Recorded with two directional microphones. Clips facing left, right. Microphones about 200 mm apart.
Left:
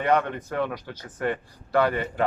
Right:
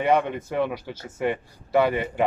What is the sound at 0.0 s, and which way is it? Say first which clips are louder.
A man's voice: right 2 dB; 10° right (ahead or behind).